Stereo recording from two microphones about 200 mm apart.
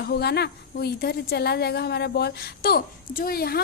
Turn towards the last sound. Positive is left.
turn(degrees=50)  # may be behind; listen again after turning